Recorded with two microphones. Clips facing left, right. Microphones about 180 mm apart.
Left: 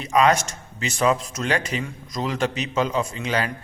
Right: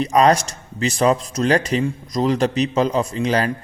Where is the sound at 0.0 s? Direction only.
35° right (ahead or behind).